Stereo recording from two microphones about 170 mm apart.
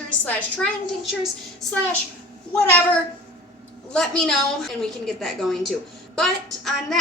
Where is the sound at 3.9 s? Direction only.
5° left (ahead or behind).